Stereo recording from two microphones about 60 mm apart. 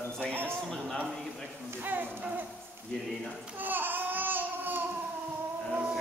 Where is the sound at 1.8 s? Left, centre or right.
Right.